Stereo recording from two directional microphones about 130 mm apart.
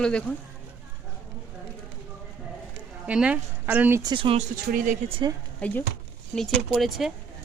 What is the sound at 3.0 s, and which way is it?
Speech, 10° right (ahead or behind).